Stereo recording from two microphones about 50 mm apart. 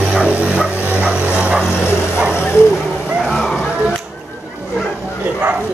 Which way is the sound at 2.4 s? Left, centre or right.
Left.